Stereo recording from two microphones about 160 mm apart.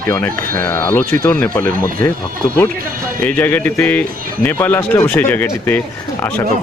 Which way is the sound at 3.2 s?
10° left (ahead or behind).